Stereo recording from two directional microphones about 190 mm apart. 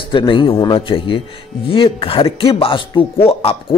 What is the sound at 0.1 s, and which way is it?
Speech, 25° left (ahead or behind).